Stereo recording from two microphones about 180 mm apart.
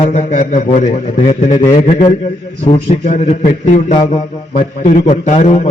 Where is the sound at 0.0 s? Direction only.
40° left (ahead or behind).